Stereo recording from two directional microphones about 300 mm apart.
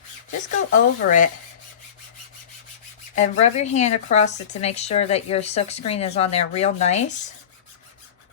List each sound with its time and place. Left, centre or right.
0.3 s speech: left
3.2 s speech: left